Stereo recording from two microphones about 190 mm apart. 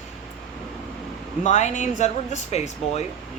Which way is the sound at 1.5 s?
40° left (ahead or behind).